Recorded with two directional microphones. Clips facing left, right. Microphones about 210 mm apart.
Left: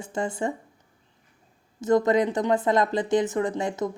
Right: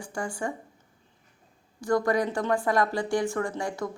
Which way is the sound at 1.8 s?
20° left (ahead or behind).